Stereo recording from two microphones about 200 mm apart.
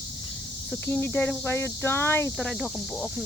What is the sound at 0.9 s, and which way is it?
Speech, 10° left (ahead or behind).